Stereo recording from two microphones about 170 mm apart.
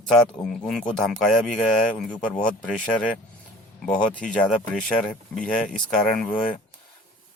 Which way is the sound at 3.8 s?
5° left (ahead or behind).